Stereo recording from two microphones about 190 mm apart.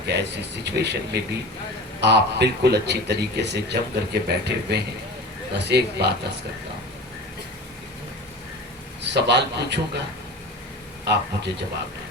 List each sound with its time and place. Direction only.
0.0 s a man's voice: 60° right (ahead or behind)
9.0 s a man's voice: 65° right (ahead or behind)
11.0 s a man's voice: 60° right (ahead or behind)